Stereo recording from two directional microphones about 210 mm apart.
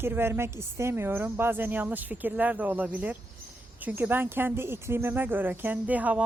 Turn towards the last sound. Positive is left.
turn(degrees=-5)  # may be behind; listen again after turning